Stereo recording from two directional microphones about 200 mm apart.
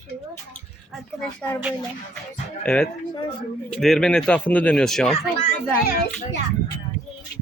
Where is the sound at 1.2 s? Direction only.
5° left (ahead or behind).